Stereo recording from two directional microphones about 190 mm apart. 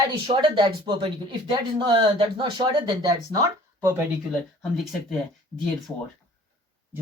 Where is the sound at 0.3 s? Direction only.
25° right (ahead or behind).